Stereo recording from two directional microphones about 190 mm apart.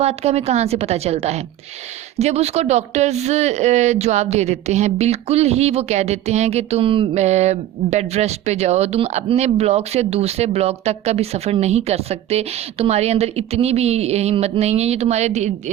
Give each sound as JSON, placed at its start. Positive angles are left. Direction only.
{"t": 0.0, "sound": "speech", "side_deg": -35}